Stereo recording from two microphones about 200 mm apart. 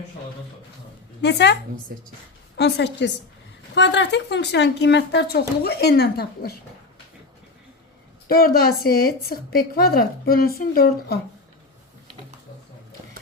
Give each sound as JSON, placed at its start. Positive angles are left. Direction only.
{"t": 1.2, "sound": "speech", "side_deg": 60}
{"t": 2.6, "sound": "speech", "side_deg": 55}
{"t": 8.3, "sound": "a woman's voice", "side_deg": 50}